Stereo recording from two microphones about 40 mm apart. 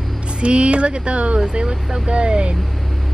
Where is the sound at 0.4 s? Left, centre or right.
Right.